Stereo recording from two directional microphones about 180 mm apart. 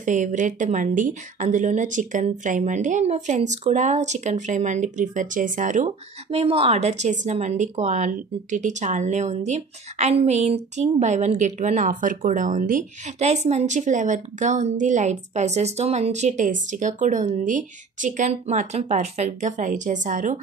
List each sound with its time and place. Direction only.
0.0 s a woman's voice: 45° right (ahead or behind)